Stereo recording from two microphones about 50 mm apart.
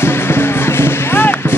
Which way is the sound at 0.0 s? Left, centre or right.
Left.